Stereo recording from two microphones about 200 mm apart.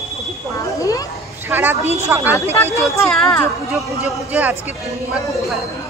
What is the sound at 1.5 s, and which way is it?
Speech, 10° right (ahead or behind).